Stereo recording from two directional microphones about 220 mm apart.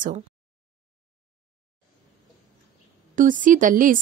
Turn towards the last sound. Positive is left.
turn(degrees=-35)  # may be behind; listen again after turning